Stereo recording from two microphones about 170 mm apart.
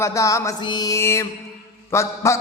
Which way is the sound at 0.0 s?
15° left (ahead or behind).